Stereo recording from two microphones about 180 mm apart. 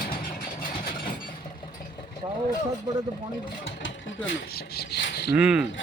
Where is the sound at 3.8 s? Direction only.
90° left; by 5.3 s 60° left (ahead or behind).